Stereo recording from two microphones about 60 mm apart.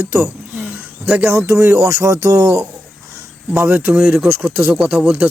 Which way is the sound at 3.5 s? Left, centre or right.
Right.